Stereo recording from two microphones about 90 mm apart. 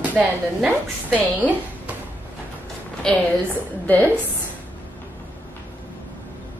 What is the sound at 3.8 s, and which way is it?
Speech, 20° left (ahead or behind).